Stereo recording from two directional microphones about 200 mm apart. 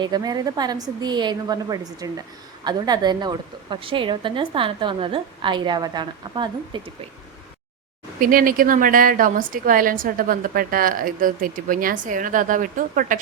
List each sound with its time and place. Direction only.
0.0 s a woman's voice: 20° right (ahead or behind)
8.2 s a woman's voice: 45° right (ahead or behind)